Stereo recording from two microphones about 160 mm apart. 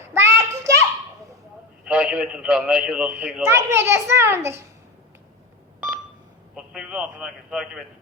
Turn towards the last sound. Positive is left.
turn(degrees=-5)  # may be behind; listen again after turning